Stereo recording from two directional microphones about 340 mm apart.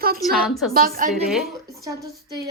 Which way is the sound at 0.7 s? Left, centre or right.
Right.